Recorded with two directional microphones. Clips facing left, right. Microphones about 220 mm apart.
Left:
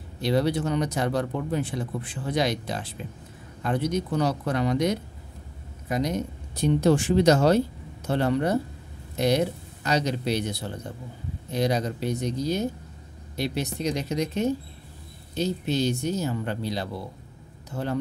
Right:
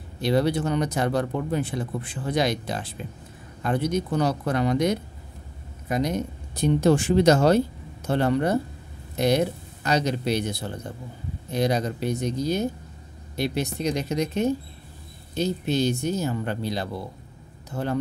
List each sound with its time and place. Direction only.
0.2 s speech: 50° right (ahead or behind)